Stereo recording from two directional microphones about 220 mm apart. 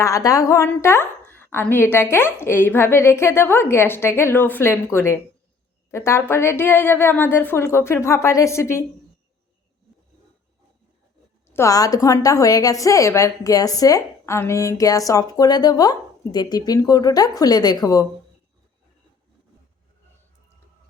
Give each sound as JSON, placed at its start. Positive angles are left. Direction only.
{"t": 0.0, "sound": "a woman's voice", "side_deg": 15}
{"t": 11.5, "sound": "a woman's voice", "side_deg": 15}